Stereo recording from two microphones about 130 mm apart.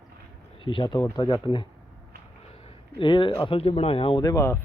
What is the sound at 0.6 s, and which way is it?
Speech, 40° left (ahead or behind).